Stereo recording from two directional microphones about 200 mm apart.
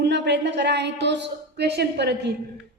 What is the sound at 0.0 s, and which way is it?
A woman's voice, 60° right (ahead or behind).